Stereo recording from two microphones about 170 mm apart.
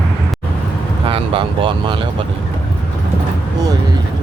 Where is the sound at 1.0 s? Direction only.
30° right (ahead or behind).